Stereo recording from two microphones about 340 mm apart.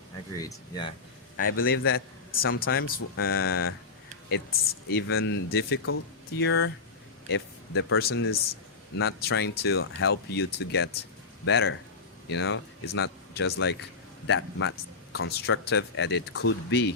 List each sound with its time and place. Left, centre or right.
0.3 s speech: centre
1.4 s speech: left
4.9 s speech: left